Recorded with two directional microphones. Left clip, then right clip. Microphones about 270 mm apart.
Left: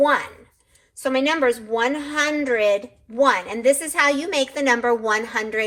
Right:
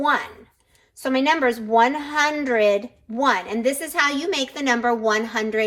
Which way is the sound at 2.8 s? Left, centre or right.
Right.